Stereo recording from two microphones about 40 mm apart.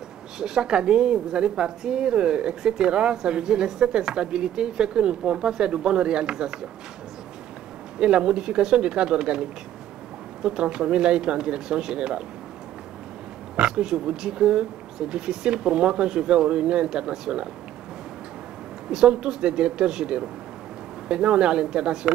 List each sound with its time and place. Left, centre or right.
0.4 s a woman's voice: centre
8.0 s a woman's voice: right
13.6 s a woman's voice: centre
18.9 s a woman's voice: centre